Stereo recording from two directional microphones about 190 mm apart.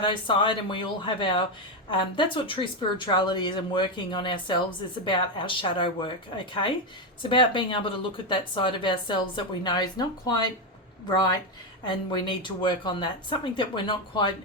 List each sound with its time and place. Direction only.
0.0 s speech: 25° left (ahead or behind)
11.9 s speech: 25° left (ahead or behind)